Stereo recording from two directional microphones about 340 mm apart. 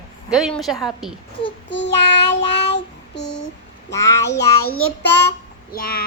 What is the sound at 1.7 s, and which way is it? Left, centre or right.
Child singing, left.